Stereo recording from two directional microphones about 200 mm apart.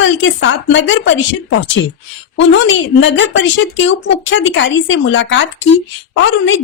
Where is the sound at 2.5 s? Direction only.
70° left (ahead or behind).